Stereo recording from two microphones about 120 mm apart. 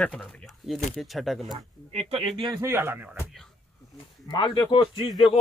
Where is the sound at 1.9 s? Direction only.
60° right (ahead or behind).